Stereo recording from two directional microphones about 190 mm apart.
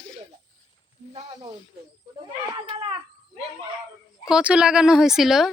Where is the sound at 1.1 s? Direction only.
25° right (ahead or behind).